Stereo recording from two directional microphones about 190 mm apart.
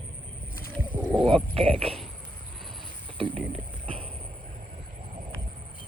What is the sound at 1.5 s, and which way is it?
Speech, 30° right (ahead or behind).